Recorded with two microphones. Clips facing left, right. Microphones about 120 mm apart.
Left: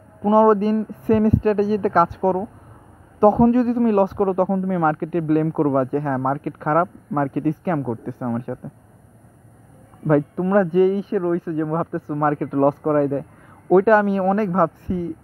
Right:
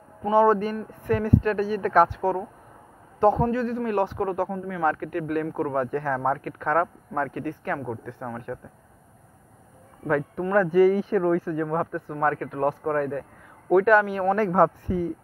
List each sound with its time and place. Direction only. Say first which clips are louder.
0.2 s speech: left 5 dB; 35° left (ahead or behind)
2.0 s speech: left 5 dB; 10° left (ahead or behind)
3.3 s a man's voice: left 9 dB; 40° left (ahead or behind)
10.0 s speech: left 7 dB; 30° left (ahead or behind)
12.1 s speech: left 6 dB; 30° left (ahead or behind)
14.3 s speech: right 3 dB; 15° left (ahead or behind)
14.9 s speech: left 1 dB; 5° left (ahead or behind)